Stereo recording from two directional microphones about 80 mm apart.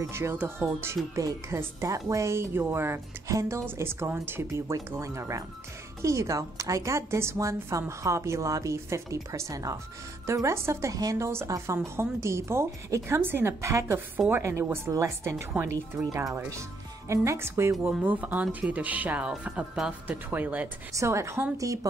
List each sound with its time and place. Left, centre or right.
0.1 s a woman's voice: right
18.0 s speech: centre
20.1 s speech: right
21.0 s a woman's voice: right